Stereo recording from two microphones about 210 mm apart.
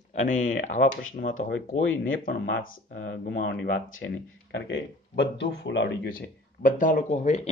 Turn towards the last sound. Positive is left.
turn(degrees=35)  # may be behind; listen again after turning